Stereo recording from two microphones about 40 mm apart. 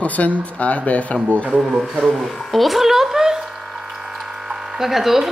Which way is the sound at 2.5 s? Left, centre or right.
Centre.